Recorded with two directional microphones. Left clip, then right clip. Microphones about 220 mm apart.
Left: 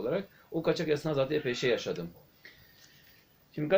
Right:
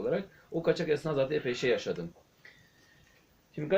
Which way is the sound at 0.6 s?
5° left (ahead or behind).